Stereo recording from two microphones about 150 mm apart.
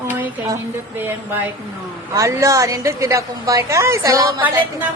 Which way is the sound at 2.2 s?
20° right (ahead or behind).